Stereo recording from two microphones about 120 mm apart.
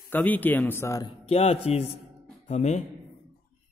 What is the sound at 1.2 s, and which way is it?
Speech, 55° left (ahead or behind).